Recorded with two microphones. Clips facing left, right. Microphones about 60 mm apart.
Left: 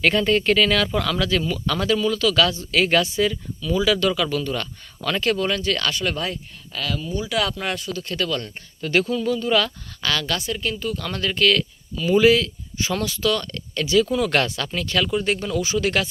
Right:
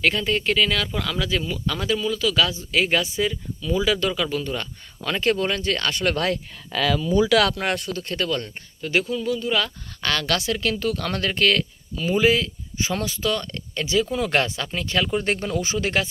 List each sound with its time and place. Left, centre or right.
0.0 s speech: centre; by 6.0 s right
6.0 s a woman's voice: right
7.6 s speech: right
8.0 s speech: right
8.8 s speech: centre
10.0 s speech: right
10.2 s a woman's voice: right
10.9 s speech: right
12.1 s speech: right
15.1 s speech: right